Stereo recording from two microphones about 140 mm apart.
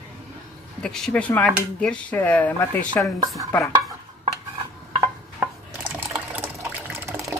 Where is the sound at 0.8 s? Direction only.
5° left (ahead or behind).